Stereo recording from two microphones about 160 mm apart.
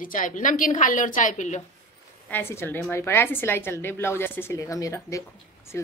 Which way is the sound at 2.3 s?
15° left (ahead or behind).